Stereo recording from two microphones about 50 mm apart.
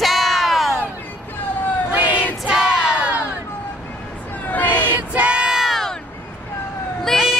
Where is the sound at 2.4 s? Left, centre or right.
Centre.